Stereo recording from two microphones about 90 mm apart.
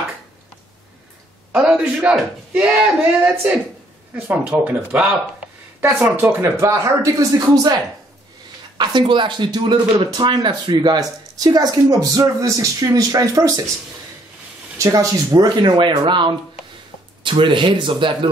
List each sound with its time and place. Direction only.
1.5 s a man's voice: 5° right (ahead or behind); by 7.8 s 45° right (ahead or behind)
8.7 s speech: 55° right (ahead or behind); by 13.6 s 40° right (ahead or behind)
14.8 s speech: 35° right (ahead or behind)
15.3 s speech: 50° right (ahead or behind); by 18.3 s 70° right (ahead or behind)